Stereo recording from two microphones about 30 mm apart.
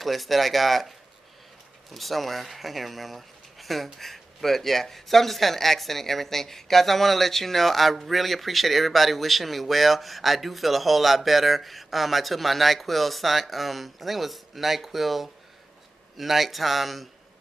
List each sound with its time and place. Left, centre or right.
0.0 s speech: centre